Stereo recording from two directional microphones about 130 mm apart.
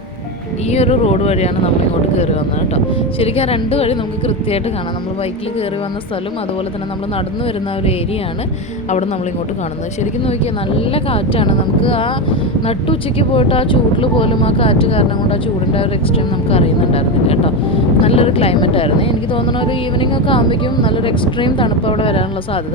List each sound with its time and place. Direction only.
0.7 s a woman's voice: 55° left (ahead or behind)
2.7 s a woman's voice: 50° left (ahead or behind)
10.2 s a woman's voice: 45° left (ahead or behind)